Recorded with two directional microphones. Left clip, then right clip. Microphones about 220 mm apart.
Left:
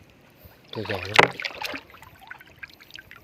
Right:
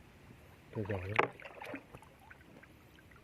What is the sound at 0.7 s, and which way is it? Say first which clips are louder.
Speech: left 14 dB; 55° left (ahead or behind).